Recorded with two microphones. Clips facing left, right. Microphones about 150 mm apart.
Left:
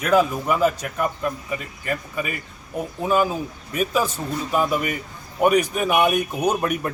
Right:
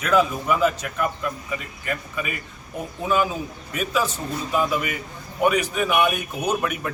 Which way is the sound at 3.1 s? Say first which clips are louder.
Left 2 dB; 40° left (ahead or behind).